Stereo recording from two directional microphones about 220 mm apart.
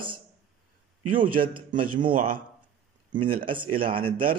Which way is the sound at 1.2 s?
20° right (ahead or behind).